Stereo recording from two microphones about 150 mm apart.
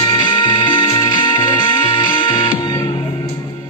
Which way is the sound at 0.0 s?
30° left (ahead or behind).